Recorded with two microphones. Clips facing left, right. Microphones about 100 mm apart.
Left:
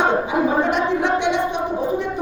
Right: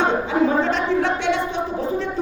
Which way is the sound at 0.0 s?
15° left (ahead or behind).